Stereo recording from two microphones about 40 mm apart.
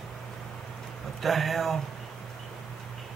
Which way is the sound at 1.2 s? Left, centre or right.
Centre.